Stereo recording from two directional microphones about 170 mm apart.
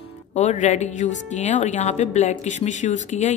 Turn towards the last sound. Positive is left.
turn(degrees=45)  # may be behind; listen again after turning